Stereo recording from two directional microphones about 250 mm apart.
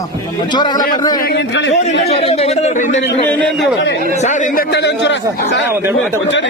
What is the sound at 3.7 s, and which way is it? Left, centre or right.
Speech, left.